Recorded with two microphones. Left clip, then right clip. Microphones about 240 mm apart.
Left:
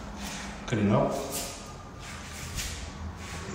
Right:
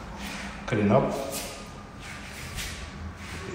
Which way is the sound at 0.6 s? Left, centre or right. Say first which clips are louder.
Right 5 dB; centre.